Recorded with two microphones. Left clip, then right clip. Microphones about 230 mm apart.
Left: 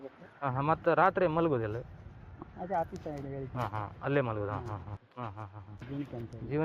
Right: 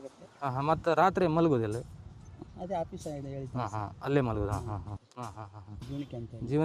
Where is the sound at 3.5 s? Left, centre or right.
Right.